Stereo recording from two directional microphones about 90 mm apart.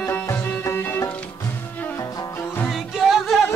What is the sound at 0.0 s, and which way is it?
Music, 25° left (ahead or behind).